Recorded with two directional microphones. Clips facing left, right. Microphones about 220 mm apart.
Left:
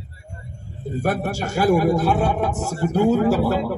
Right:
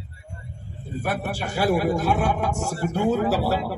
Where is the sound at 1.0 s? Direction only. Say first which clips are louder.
Left 4 dB; 45° left (ahead or behind).